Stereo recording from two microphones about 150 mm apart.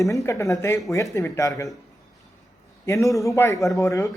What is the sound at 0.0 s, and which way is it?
Speech, 20° left (ahead or behind).